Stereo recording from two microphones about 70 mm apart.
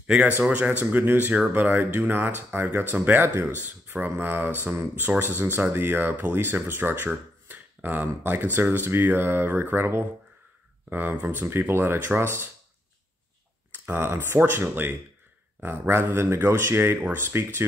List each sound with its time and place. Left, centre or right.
0.0 s speech: centre; by 12.4 s right
13.8 s speech: right